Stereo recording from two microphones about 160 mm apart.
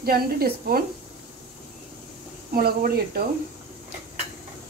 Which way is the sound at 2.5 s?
65° right (ahead or behind).